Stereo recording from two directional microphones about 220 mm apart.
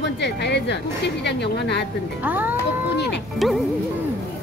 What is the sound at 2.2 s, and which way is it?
Speech, 10° right (ahead or behind).